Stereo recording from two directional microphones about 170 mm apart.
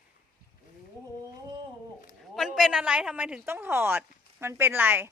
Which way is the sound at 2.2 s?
Centre (ahead or behind).